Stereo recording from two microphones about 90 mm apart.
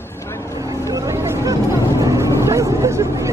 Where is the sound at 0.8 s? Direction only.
35° right (ahead or behind).